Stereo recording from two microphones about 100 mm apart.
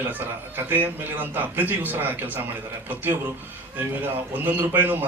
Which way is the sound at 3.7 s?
20° right (ahead or behind).